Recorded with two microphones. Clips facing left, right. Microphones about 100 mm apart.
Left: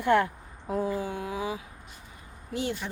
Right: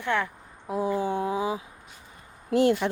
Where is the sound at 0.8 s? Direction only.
25° right (ahead or behind).